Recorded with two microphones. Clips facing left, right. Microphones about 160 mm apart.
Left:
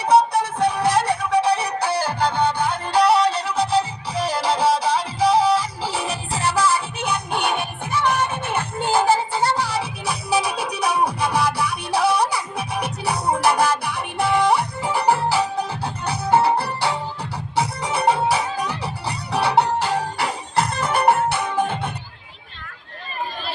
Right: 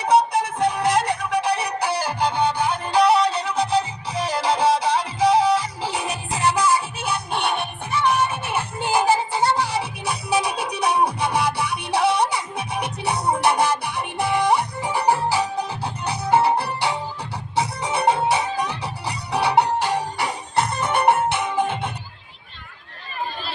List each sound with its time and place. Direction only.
0.0 s music: 20° right (ahead or behind)